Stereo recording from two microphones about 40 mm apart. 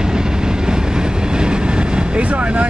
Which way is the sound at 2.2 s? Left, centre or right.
Right.